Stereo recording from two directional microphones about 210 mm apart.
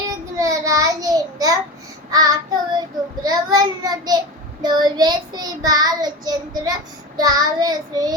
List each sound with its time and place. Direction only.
0.3 s child singing: 15° right (ahead or behind)